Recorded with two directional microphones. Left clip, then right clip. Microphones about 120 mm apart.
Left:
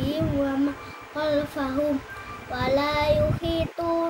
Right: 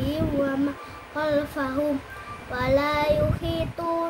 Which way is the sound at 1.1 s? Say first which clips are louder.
Even; 15° right (ahead or behind).